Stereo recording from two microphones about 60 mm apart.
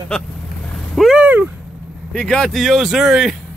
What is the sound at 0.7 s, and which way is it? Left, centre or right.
Vehicle, centre.